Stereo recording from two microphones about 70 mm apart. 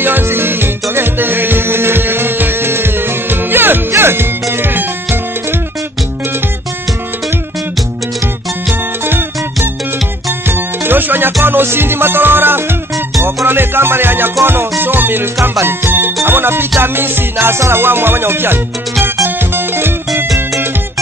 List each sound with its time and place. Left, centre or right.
0.0 s music: right
10.5 s music: right